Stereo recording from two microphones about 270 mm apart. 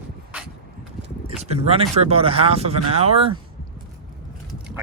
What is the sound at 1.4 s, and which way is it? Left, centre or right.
Speech, right.